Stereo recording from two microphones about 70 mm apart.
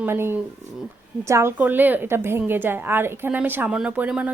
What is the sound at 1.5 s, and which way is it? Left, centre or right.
A woman's voice, right.